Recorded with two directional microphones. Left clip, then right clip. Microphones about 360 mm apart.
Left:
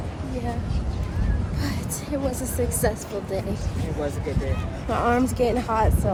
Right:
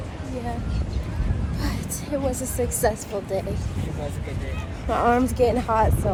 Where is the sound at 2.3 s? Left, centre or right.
Centre.